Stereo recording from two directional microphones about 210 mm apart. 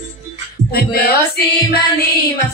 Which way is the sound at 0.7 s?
45° left (ahead or behind).